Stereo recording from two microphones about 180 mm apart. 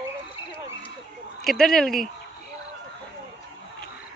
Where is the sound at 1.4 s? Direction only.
Centre (ahead or behind).